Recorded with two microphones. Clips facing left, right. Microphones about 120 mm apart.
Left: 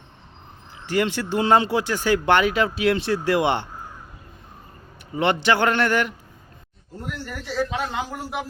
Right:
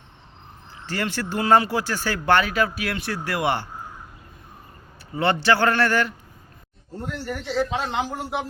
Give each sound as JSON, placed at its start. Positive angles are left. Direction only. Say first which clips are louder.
{"t": 0.9, "sound": "speech", "louder": "left 5 dB", "side_deg": 15}
{"t": 5.1, "sound": "a man's voice", "louder": "even", "side_deg": 15}
{"t": 7.0, "sound": "a man's voice", "louder": "right 3 dB", "side_deg": -25}